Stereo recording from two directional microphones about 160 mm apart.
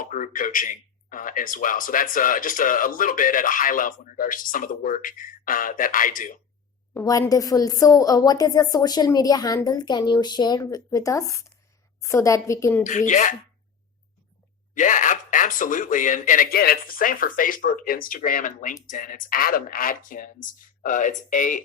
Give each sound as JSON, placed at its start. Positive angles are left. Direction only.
{"t": 0.0, "sound": "speech", "side_deg": 55}
{"t": 6.9, "sound": "a woman's voice", "side_deg": 20}
{"t": 12.8, "sound": "speech", "side_deg": 50}
{"t": 14.8, "sound": "speech", "side_deg": 50}